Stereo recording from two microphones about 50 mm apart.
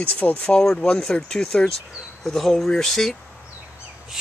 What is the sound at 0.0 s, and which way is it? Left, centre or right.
Speech, left.